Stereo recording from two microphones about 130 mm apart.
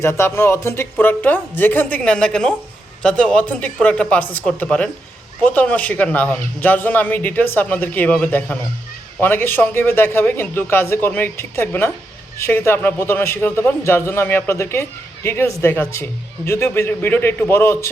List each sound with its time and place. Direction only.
0.0 s a man's voice: 20° left (ahead or behind)